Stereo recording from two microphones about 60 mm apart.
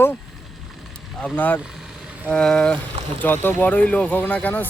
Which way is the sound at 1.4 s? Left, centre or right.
Left.